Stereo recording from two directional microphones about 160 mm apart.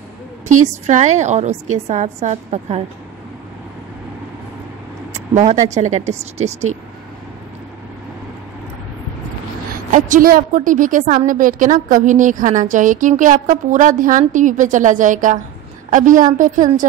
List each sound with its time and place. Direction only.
0.5 s a woman's voice: 50° right (ahead or behind)
5.1 s a woman's voice: 45° right (ahead or behind)
9.9 s a woman's voice: 55° right (ahead or behind)